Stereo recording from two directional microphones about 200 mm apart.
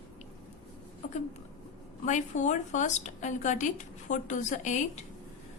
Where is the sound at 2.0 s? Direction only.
40° left (ahead or behind).